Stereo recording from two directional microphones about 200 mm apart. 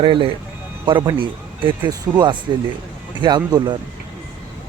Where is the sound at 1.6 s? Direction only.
25° right (ahead or behind).